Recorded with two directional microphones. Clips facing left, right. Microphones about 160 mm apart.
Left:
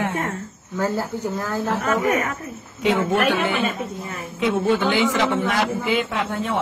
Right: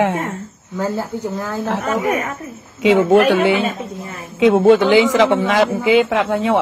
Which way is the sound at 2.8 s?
90° right.